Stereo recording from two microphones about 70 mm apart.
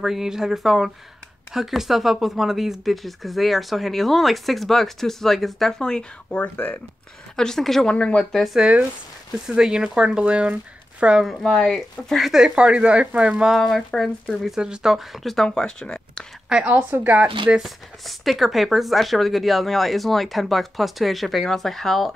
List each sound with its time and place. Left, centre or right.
0.0 s speech: centre
6.4 s speech: left
7.3 s speech: centre
8.5 s speech: centre
11.5 s speech: centre
12.3 s speech: centre
13.5 s speech: centre
16.6 s speech: right
17.6 s speech: centre